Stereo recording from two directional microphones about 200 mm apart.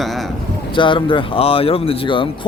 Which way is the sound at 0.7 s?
25° left (ahead or behind).